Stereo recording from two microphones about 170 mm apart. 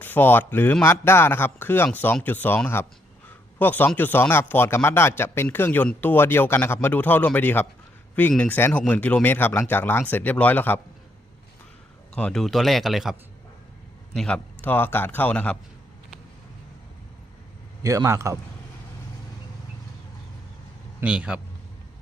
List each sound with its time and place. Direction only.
0.0 s a man's voice: 10° left (ahead or behind)
12.1 s a man's voice: 5° left (ahead or behind)
17.8 s a man's voice: 15° right (ahead or behind)
21.0 s a man's voice: 5° right (ahead or behind)